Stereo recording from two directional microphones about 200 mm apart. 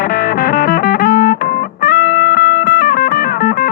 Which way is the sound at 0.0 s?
50° left (ahead or behind).